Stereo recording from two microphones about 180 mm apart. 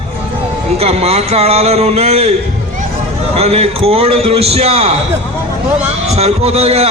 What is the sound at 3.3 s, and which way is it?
A man's voice, 35° right (ahead or behind).